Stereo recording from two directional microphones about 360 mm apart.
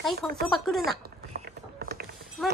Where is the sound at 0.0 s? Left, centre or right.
Centre.